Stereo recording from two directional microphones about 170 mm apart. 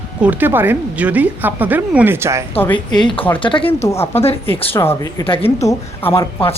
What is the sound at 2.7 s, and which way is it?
Speech, 25° left (ahead or behind).